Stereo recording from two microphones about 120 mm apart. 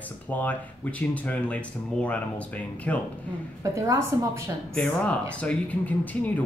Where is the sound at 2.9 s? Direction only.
10° left (ahead or behind).